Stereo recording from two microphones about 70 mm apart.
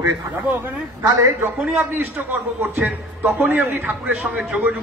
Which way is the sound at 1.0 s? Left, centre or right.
Right.